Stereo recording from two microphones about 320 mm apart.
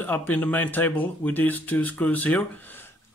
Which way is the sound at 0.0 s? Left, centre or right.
Centre.